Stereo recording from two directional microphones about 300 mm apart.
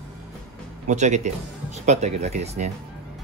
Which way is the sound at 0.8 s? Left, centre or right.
Right.